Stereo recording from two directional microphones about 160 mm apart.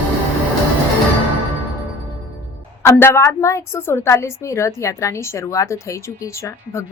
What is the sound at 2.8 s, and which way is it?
A woman's voice, 15° left (ahead or behind).